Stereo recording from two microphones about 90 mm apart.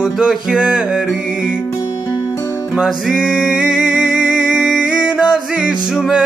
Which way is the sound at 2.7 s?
5° right (ahead or behind).